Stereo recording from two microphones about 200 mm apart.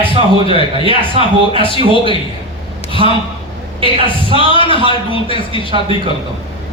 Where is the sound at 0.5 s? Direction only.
25° right (ahead or behind).